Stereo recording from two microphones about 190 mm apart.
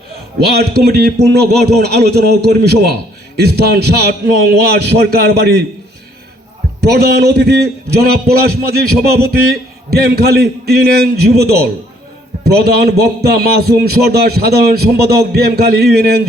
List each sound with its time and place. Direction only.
0.3 s a man's voice: 55° right (ahead or behind)
6.8 s a man's voice: 60° right (ahead or behind)